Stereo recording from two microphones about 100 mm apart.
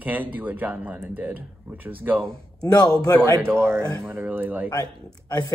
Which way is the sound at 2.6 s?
40° left (ahead or behind).